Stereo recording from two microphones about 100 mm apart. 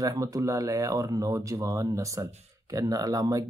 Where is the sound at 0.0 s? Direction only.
35° right (ahead or behind).